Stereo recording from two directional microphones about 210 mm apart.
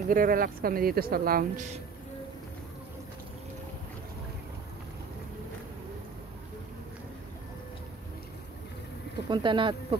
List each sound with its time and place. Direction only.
0.1 s speech: 45° right (ahead or behind)
9.3 s speech: 20° right (ahead or behind)